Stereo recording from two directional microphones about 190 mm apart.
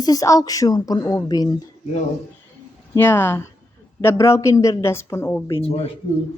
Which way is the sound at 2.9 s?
10° left (ahead or behind).